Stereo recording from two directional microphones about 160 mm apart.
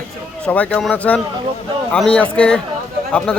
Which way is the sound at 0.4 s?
10° left (ahead or behind).